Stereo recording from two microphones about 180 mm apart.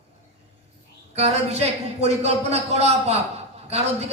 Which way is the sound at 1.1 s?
35° right (ahead or behind).